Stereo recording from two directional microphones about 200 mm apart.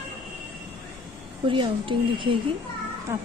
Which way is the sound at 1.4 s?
25° right (ahead or behind).